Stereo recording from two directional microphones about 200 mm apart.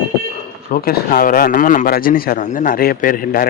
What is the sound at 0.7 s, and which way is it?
Speech, 45° left (ahead or behind).